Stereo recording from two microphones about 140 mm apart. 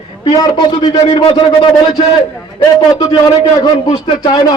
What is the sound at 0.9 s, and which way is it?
Speech, 45° left (ahead or behind).